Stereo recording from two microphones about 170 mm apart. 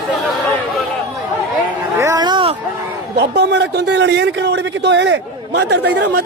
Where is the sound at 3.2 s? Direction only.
85° right.